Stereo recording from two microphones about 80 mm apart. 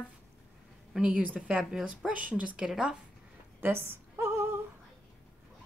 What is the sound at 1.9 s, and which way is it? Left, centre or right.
A woman's voice, centre.